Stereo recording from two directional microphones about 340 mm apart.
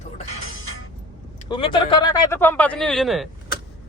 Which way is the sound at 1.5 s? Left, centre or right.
Centre.